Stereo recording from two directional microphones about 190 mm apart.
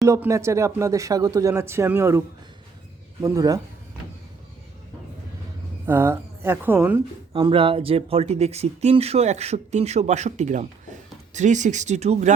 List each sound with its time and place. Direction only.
0.0 s speech: 15° right (ahead or behind)
5.8 s a woman's voice: 10° right (ahead or behind)
7.3 s speech: 25° right (ahead or behind)